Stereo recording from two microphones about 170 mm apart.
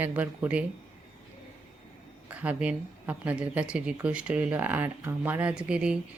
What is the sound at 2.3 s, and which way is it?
Speech, 10° right (ahead or behind).